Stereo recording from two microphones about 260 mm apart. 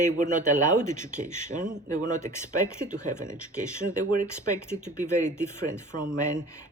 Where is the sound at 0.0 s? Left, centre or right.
Right.